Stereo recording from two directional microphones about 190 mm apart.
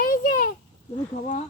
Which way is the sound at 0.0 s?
50° left (ahead or behind).